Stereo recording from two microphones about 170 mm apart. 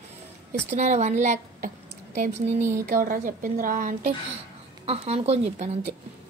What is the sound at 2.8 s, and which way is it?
A woman's voice, 55° right (ahead or behind).